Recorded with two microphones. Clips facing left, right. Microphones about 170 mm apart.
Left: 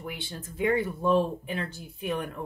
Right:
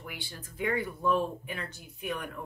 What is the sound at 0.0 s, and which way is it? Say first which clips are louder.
Speech: left 6 dB; 25° left (ahead or behind).